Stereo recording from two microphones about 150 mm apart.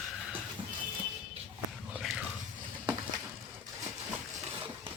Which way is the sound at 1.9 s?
5° right (ahead or behind).